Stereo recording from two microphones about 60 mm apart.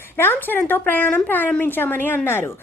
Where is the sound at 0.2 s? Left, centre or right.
Left.